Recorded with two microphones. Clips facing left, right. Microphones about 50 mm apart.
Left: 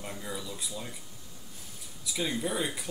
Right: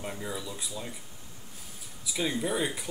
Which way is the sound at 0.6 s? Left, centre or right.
Centre.